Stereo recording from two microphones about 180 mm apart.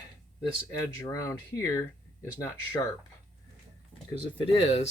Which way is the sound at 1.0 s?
15° left (ahead or behind).